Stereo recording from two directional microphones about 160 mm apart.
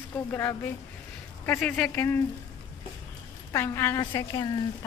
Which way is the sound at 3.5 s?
15° left (ahead or behind).